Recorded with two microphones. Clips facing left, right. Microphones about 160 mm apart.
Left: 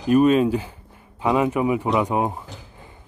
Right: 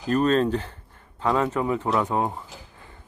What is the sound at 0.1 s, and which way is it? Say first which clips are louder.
Speech: left 5 dB; 10° left (ahead or behind).